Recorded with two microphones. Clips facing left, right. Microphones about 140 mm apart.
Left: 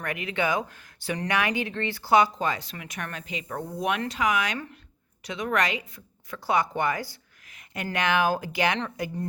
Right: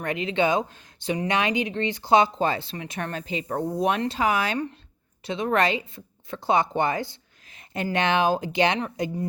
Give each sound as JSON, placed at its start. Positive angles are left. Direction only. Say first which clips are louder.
{"t": 0.0, "sound": "speech", "louder": "right 5 dB", "side_deg": -25}